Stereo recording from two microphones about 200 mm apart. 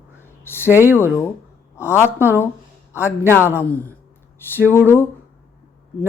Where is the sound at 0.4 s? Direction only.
10° left (ahead or behind).